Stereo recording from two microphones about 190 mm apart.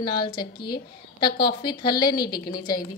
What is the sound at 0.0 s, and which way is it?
A woman's voice, 25° left (ahead or behind).